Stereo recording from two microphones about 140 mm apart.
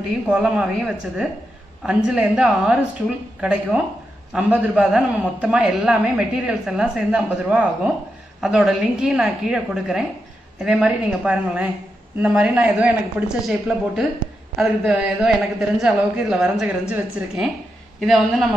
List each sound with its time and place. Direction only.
0.3 s a man's voice: 5° right (ahead or behind)
13.5 s a man's voice: centre (ahead or behind)